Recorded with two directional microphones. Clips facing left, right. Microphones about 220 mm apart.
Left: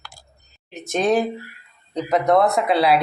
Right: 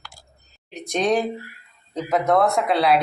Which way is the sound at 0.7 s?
5° left (ahead or behind).